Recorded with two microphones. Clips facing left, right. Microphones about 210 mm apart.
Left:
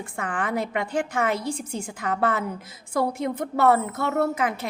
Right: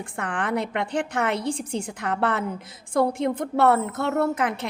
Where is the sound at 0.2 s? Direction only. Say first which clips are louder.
Right 1 dB; 60° right (ahead or behind).